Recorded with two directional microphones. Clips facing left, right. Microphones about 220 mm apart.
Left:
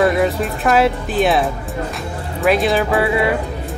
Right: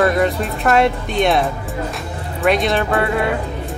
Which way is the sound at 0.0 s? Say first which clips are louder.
Left 1 dB; centre (ahead or behind).